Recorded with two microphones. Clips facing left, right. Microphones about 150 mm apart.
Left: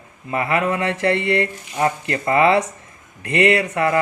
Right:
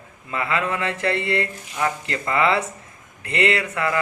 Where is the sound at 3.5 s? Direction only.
30° left (ahead or behind).